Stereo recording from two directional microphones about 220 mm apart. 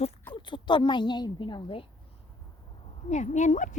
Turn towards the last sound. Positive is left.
turn(degrees=35)  # may be behind; listen again after turning